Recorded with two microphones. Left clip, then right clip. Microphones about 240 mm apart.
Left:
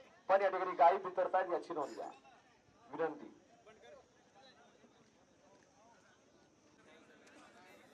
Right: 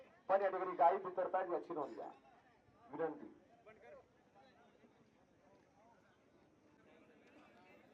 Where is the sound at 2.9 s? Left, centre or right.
Centre.